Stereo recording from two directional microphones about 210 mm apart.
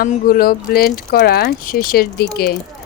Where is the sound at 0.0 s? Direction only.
45° left (ahead or behind).